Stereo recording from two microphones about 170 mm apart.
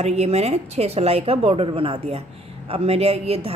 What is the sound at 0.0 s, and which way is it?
A woman's voice, 40° right (ahead or behind).